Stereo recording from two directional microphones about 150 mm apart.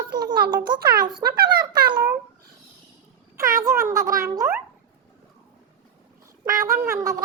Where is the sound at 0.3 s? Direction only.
90° right.